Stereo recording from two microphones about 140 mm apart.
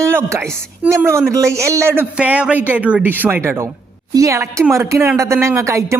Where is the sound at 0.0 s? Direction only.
20° right (ahead or behind).